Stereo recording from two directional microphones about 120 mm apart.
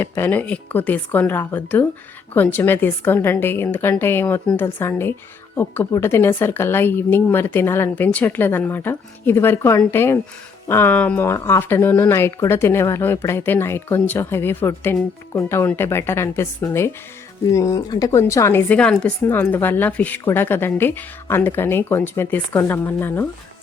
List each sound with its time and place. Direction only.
0.0 s a woman's voice: 15° left (ahead or behind)
18.7 s a woman's voice: 10° left (ahead or behind)